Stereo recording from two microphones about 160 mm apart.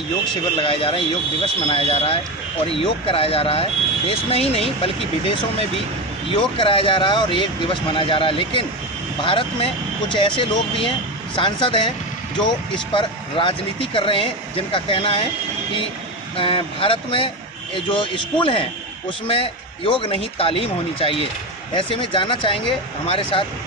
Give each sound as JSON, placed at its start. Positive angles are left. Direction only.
{"t": 0.6, "sound": "a man's voice", "side_deg": 35}
{"t": 16.3, "sound": "a man's voice", "side_deg": 35}